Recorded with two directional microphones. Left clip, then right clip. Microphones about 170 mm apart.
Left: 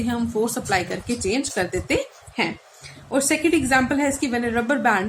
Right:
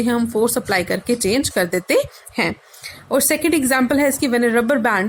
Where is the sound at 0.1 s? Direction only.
60° right (ahead or behind).